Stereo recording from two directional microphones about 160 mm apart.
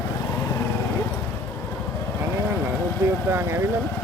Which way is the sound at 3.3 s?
15° right (ahead or behind).